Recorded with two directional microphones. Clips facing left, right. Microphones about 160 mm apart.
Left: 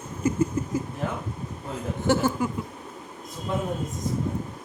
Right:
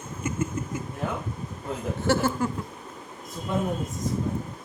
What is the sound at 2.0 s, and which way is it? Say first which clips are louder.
Speech: left 1 dB; 15° left (ahead or behind).